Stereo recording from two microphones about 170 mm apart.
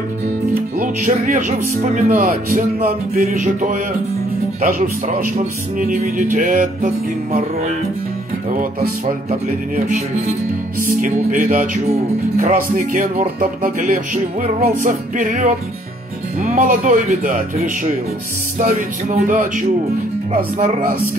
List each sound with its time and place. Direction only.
0.7 s music: 55° right (ahead or behind)
8.5 s music: 50° right (ahead or behind)
16.3 s speech: 40° right (ahead or behind)
16.6 s music: 55° right (ahead or behind)
18.6 s music: 55° right (ahead or behind)
19.0 s a man's voice: 40° right (ahead or behind)
19.3 s music: 50° right (ahead or behind)